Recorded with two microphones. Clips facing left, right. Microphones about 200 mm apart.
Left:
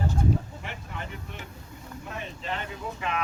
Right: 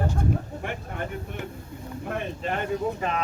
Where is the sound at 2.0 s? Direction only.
55° right (ahead or behind).